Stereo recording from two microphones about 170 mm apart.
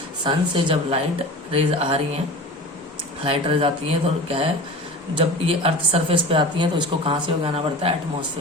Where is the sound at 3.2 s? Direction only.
30° right (ahead or behind).